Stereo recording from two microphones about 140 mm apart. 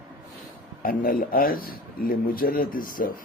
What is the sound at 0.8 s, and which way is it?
A man's voice, 90° left.